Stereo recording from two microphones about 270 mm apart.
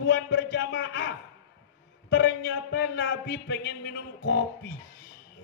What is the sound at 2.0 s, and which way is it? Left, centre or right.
A man's voice, left.